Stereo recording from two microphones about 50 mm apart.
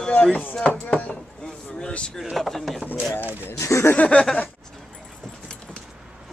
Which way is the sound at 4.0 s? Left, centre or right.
Left.